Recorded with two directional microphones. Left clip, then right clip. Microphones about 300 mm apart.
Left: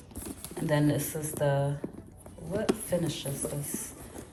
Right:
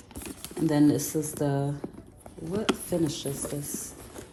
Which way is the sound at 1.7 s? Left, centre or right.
Centre.